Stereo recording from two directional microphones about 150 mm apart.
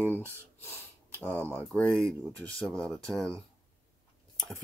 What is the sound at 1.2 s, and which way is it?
Speech, 15° left (ahead or behind).